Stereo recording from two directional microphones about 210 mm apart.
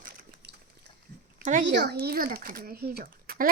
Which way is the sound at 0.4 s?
55° right (ahead or behind).